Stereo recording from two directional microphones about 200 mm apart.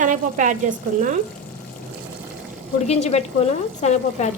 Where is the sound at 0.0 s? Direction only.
40° right (ahead or behind).